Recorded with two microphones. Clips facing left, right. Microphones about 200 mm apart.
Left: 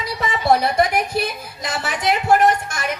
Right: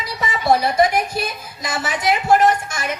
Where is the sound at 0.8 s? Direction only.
60° left (ahead or behind).